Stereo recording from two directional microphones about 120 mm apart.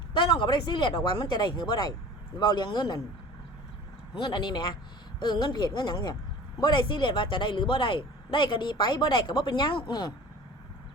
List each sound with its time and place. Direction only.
0.1 s speech: 40° left (ahead or behind)
4.1 s speech: 40° left (ahead or behind)